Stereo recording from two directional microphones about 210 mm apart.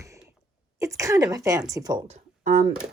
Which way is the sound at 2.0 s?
35° right (ahead or behind).